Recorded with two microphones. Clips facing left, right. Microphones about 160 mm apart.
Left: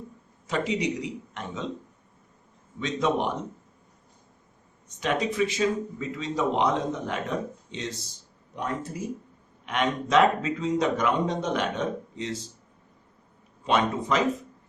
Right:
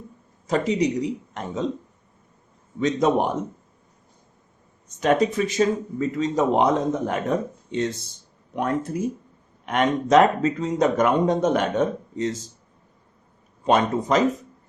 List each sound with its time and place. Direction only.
0.4 s a man's voice: 40° right (ahead or behind)
2.8 s speech: 45° right (ahead or behind)
4.9 s speech: 45° right (ahead or behind)
9.6 s speech: 45° right (ahead or behind)
13.7 s a man's voice: 40° right (ahead or behind)